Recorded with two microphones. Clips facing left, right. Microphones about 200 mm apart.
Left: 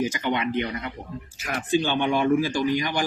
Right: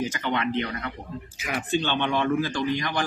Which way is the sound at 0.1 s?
10° left (ahead or behind).